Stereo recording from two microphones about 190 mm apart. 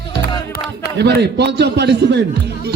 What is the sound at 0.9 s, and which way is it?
A man's voice, 60° right (ahead or behind).